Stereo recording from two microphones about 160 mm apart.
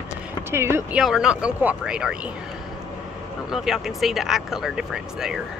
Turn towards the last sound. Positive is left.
turn(degrees=-5)  # may be behind; listen again after turning